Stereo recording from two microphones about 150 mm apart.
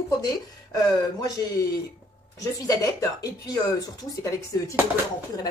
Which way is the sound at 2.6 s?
25° left (ahead or behind).